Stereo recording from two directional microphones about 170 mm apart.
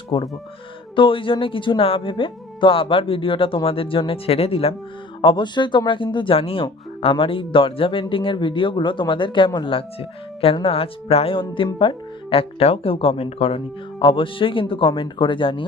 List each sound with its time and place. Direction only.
0.1 s speech: 25° left (ahead or behind)